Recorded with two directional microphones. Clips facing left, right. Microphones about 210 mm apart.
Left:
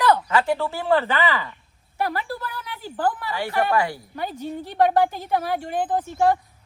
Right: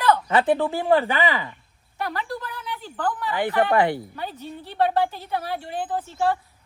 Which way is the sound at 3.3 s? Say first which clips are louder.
Right 5 dB; 20° right (ahead or behind).